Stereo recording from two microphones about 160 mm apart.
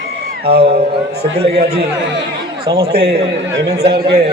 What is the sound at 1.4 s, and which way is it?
Speech, 40° right (ahead or behind).